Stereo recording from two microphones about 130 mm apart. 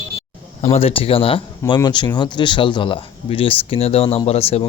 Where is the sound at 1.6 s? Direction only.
35° left (ahead or behind).